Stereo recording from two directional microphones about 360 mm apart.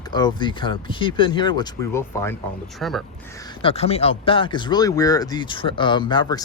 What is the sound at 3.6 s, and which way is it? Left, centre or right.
Speech, centre.